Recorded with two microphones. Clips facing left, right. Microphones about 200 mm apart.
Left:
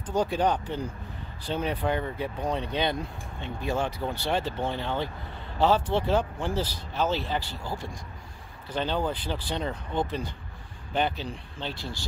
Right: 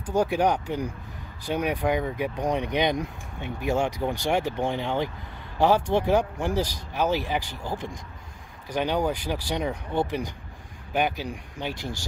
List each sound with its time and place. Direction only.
0.0 s speech: 10° right (ahead or behind)